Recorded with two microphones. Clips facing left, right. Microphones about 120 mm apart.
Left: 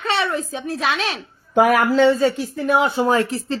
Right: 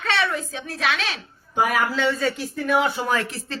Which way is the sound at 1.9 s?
30° left (ahead or behind).